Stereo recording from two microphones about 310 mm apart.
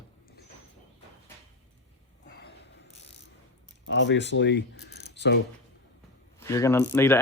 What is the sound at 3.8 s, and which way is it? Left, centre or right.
Speech, left.